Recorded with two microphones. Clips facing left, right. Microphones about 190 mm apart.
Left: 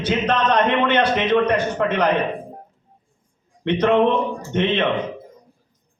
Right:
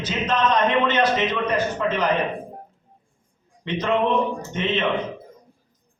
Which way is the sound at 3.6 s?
60° left (ahead or behind).